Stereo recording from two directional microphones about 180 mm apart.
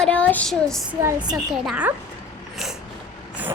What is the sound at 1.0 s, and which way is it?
Speech, 20° right (ahead or behind).